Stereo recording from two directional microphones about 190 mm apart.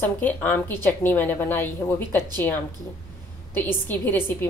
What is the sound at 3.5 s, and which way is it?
Speech, 10° left (ahead or behind).